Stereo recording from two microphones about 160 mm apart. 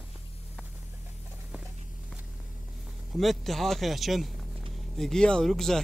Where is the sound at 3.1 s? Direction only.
Centre (ahead or behind).